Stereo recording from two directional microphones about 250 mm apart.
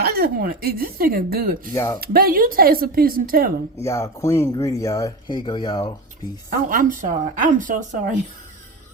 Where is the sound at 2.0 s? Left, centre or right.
Right.